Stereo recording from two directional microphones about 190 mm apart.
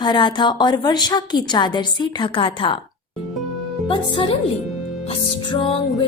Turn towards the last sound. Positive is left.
turn(degrees=30)  # may be behind; listen again after turning